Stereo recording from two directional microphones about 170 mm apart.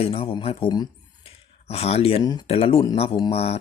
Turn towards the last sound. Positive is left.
turn(degrees=35)  # may be behind; listen again after turning